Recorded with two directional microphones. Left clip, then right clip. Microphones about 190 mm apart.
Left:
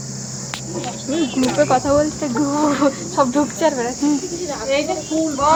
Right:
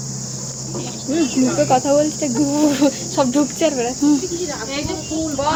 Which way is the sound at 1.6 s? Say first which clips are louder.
Right 2 dB; 20° right (ahead or behind).